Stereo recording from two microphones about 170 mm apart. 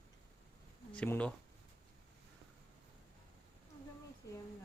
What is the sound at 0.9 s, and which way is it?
Speech, 10° left (ahead or behind).